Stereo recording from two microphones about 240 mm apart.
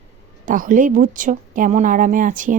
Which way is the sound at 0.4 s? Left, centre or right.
Right.